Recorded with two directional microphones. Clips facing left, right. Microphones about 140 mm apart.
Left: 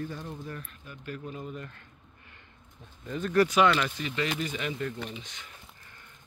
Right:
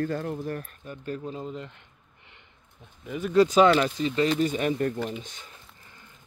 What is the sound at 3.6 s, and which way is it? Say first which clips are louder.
Speech: right 5 dB; 30° right (ahead or behind).